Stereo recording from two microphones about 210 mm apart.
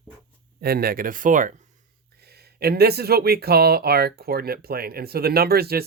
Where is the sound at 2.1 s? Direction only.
50° right (ahead or behind).